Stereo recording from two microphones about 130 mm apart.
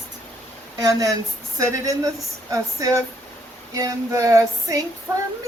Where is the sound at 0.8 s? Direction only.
25° right (ahead or behind).